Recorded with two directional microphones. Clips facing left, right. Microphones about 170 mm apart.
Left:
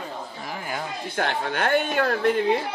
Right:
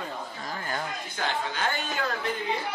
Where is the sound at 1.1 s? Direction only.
60° left (ahead or behind).